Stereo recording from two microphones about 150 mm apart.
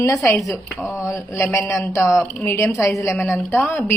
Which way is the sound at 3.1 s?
5° left (ahead or behind).